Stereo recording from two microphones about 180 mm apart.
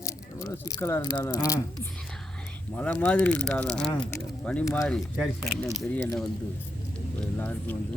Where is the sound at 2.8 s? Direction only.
10° left (ahead or behind).